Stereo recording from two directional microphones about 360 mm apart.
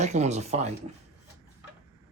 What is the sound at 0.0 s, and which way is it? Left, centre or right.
Speech, centre.